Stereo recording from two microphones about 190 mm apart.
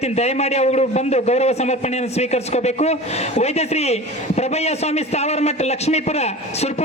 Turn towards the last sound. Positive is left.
turn(degrees=35)  # may be behind; listen again after turning